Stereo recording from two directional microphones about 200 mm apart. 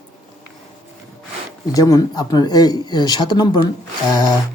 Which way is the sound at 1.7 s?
15° left (ahead or behind).